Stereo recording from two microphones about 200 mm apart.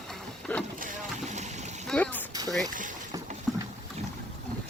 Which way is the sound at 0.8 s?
35° right (ahead or behind).